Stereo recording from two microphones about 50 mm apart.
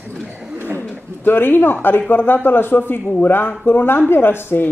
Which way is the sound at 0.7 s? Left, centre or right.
Left.